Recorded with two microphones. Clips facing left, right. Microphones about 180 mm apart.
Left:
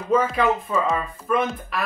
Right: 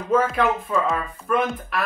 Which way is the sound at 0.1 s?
Centre (ahead or behind).